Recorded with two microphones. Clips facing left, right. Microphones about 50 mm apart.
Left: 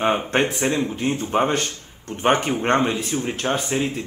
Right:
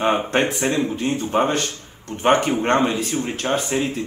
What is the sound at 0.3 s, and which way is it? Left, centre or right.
A man's voice, centre.